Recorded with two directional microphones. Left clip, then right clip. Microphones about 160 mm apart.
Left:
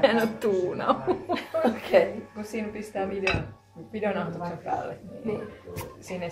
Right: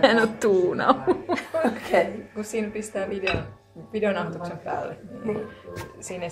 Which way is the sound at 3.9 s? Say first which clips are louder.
Right 4 dB; 55° right (ahead or behind).